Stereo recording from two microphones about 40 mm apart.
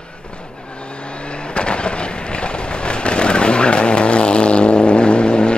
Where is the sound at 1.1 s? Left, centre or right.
Left.